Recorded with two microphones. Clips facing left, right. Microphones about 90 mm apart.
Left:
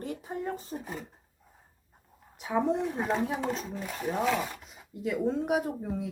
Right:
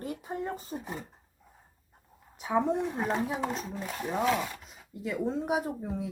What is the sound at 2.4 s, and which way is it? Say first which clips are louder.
Speech: even; centre (ahead or behind).